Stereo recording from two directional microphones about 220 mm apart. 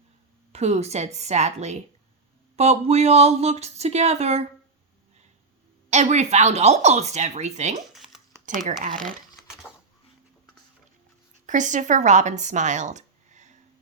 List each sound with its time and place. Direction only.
0.5 s speech: 30° right (ahead or behind)
5.9 s speech: 30° right (ahead or behind)
7.9 s a sound: centre (ahead or behind)
9.0 s crumpling: centre (ahead or behind)
11.4 s speech: 35° right (ahead or behind)